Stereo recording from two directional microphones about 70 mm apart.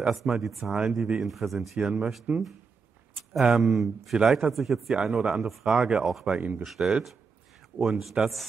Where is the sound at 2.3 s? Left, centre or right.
Right.